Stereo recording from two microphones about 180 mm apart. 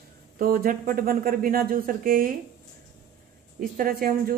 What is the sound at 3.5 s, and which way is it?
Speech, 55° right (ahead or behind).